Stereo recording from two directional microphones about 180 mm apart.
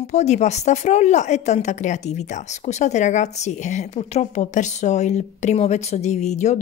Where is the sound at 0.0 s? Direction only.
40° left (ahead or behind).